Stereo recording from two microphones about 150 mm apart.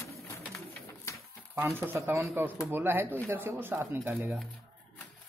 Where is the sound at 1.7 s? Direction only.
15° right (ahead or behind).